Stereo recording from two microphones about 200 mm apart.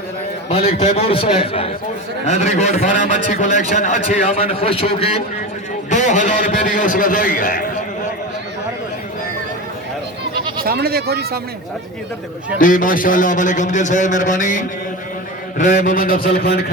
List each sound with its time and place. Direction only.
0.5 s a man's voice: 30° left (ahead or behind)
10.6 s speech: 50° right (ahead or behind)
12.5 s a man's voice: 45° left (ahead or behind)
15.5 s a sound: 40° left (ahead or behind)